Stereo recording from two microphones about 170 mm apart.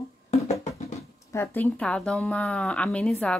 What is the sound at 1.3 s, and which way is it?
Speech, 15° left (ahead or behind).